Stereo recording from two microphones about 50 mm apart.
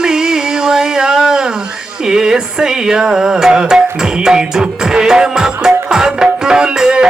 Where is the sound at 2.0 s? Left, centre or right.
Centre.